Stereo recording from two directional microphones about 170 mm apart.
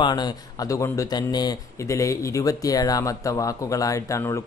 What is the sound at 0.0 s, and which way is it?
Speech, 25° left (ahead or behind).